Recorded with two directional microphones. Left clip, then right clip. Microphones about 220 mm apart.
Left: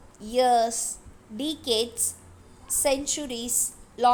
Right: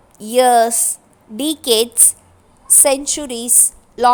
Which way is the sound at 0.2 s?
30° right (ahead or behind).